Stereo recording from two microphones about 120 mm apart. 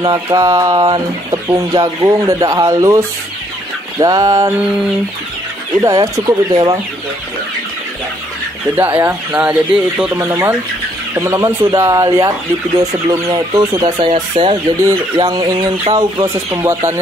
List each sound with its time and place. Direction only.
0.0 s speech: 30° right (ahead or behind)
4.6 s a sound: 5° right (ahead or behind)
5.8 s speech: 25° right (ahead or behind)
8.7 s speech: 15° right (ahead or behind)
10.1 s speech: 25° right (ahead or behind)
13.6 s speech: 30° right (ahead or behind)
14.0 s speech: 45° right (ahead or behind)
16.0 s speech: 30° right (ahead or behind)